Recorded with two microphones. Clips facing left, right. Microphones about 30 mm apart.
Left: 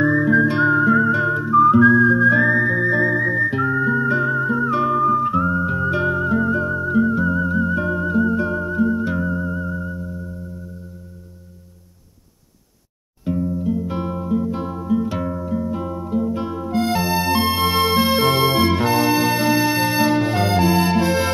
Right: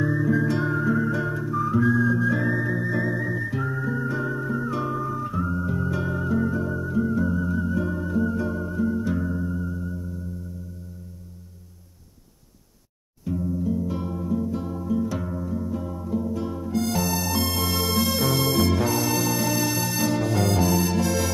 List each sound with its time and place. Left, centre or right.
0.0 s music: left
5.9 s music: left
6.1 s music: left
13.2 s music: left